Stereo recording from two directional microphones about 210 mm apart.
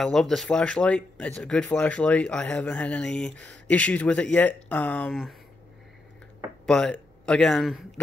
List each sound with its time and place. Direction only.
0.0 s speech: centre (ahead or behind)
6.6 s a man's voice: 5° left (ahead or behind)